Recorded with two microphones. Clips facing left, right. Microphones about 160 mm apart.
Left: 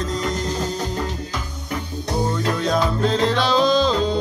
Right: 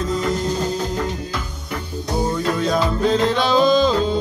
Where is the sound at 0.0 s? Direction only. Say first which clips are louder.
Right 3 dB; 5° right (ahead or behind).